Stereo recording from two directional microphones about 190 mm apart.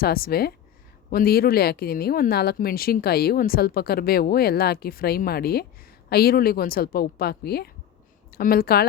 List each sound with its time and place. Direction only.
0.0 s a woman's voice: 55° left (ahead or behind)